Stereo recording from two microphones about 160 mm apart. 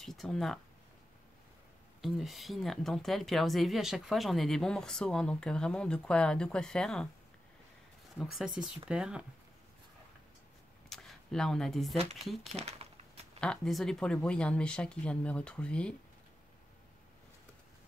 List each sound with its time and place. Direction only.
0.0 s speech: centre (ahead or behind)
2.0 s speech: centre (ahead or behind)
8.2 s speech: centre (ahead or behind)
10.9 s speech: centre (ahead or behind)
12.5 s a sound: 40° right (ahead or behind)
13.4 s speech: 5° left (ahead or behind)